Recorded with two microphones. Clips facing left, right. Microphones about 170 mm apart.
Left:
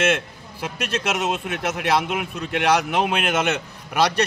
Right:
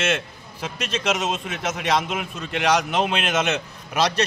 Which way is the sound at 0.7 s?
60° left (ahead or behind).